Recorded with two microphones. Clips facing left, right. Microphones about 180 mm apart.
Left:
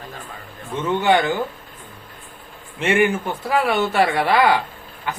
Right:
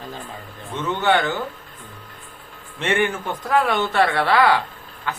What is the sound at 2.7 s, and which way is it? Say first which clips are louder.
Speech: left 3 dB; 10° left (ahead or behind).